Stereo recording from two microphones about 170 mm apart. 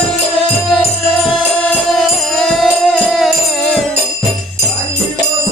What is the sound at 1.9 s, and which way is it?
Music, centre (ahead or behind).